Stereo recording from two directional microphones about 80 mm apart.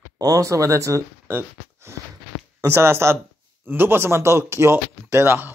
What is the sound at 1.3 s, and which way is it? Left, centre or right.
Speech, right.